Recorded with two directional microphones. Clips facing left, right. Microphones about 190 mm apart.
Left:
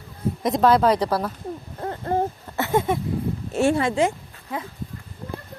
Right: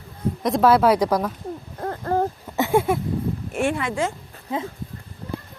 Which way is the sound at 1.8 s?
20° left (ahead or behind).